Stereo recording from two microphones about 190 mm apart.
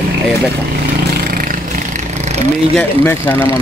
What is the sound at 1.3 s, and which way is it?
Vehicle, 45° right (ahead or behind).